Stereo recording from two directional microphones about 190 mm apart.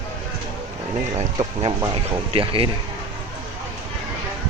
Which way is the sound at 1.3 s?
25° right (ahead or behind).